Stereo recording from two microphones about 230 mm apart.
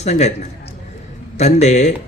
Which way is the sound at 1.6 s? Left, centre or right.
Left.